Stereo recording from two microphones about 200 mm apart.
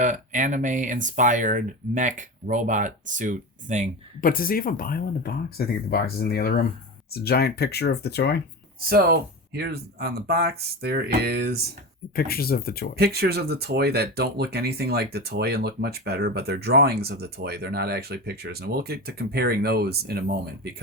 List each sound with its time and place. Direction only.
0.0 s speech: 40° right (ahead or behind)
4.2 s speech: 45° left (ahead or behind)
8.8 s speech: 50° right (ahead or behind)
12.1 s speech: 50° left (ahead or behind)
13.0 s speech: 50° right (ahead or behind)